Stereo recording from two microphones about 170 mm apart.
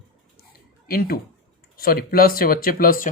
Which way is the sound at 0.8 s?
60° left (ahead or behind).